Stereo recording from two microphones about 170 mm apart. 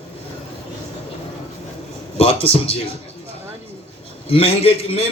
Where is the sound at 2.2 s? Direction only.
35° left (ahead or behind).